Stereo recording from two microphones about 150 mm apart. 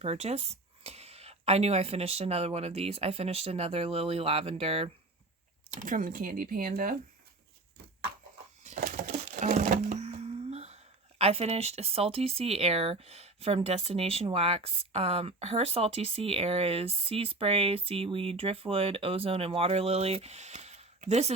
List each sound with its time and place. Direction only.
0.0 s speech: 45° right (ahead or behind)
5.8 s speech: 65° right (ahead or behind)
9.0 s a sound: 60° right (ahead or behind)